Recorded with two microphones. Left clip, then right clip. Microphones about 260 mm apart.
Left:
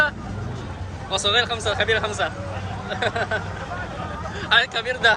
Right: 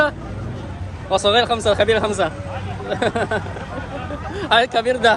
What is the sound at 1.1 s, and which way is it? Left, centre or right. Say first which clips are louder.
Speech: right 5 dB; centre.